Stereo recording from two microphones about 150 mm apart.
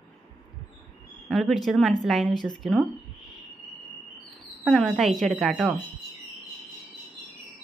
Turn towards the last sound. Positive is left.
turn(degrees=-5)  # may be behind; listen again after turning